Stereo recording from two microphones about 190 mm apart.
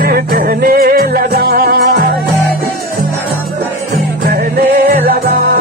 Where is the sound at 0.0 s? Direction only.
50° right (ahead or behind).